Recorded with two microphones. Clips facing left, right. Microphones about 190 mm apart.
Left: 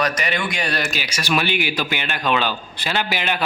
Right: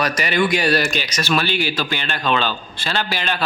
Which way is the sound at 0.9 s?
10° left (ahead or behind).